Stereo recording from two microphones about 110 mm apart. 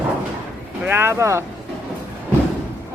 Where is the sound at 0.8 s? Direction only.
20° right (ahead or behind).